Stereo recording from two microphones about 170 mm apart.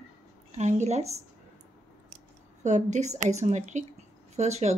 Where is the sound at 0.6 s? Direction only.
40° right (ahead or behind).